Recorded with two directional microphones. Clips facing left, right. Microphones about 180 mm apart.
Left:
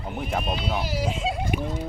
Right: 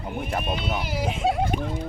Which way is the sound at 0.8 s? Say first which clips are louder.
Right 1 dB; 55° right (ahead or behind).